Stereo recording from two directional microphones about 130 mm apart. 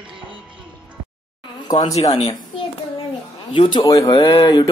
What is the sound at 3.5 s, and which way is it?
Speech, 40° left (ahead or behind).